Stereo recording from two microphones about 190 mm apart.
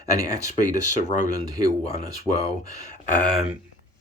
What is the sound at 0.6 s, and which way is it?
Speech, 40° left (ahead or behind).